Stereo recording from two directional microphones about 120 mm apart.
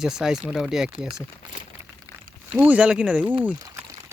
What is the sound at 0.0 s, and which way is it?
Speech, 5° right (ahead or behind).